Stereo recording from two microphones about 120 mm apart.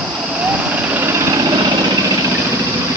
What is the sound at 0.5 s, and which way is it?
Vehicle, 15° right (ahead or behind).